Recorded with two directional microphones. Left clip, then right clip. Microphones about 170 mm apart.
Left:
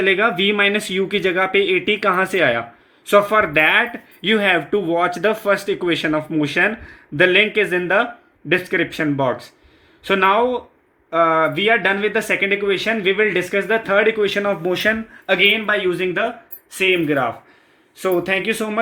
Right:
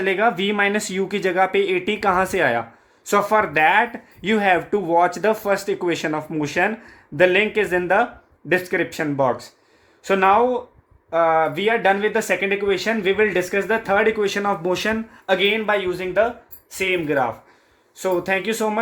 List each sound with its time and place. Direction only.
0.0 s speech: 30° right (ahead or behind)